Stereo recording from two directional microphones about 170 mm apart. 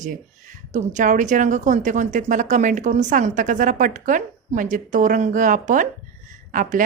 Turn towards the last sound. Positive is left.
turn(degrees=-55)  # may be behind; listen again after turning